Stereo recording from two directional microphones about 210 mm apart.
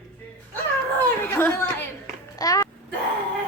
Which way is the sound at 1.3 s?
10° left (ahead or behind).